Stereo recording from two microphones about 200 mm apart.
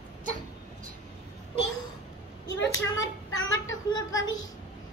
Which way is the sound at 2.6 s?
75° left (ahead or behind).